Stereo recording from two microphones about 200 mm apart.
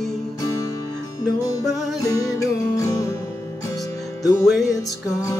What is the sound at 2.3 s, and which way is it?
Music, 15° left (ahead or behind).